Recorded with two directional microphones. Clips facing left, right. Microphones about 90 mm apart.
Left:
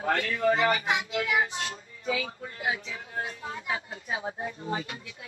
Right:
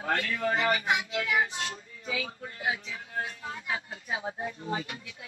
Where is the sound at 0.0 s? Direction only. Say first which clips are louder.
Left 3 dB; 35° left (ahead or behind).